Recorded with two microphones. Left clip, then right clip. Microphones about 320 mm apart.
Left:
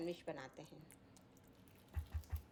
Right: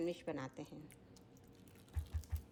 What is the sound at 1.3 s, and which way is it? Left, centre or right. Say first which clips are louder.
Water: right 3 dB; centre.